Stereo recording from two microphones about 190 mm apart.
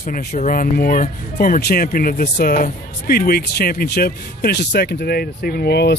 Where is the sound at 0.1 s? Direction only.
45° left (ahead or behind).